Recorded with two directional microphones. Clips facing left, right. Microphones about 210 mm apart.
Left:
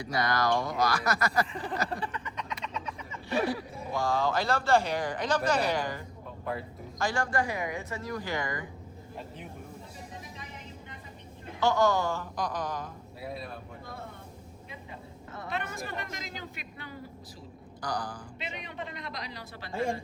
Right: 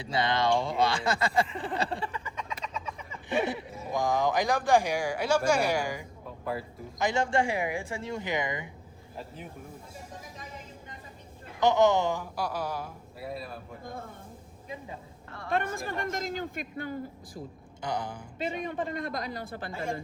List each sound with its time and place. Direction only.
0.2 s speech: 25° right (ahead or behind)
3.2 s speech: 20° right (ahead or behind)
7.0 s speech: 20° right (ahead or behind)
11.6 s speech: 20° right (ahead or behind); by 13.6 s centre (ahead or behind)
15.4 s speech: 50° right (ahead or behind)
17.8 s speech: 25° right (ahead or behind)
18.3 s speech: 50° right (ahead or behind)